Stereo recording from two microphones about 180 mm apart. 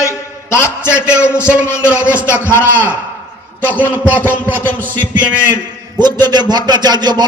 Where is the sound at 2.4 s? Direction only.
10° left (ahead or behind).